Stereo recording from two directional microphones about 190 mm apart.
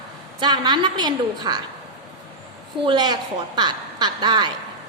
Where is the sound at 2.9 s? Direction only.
25° right (ahead or behind).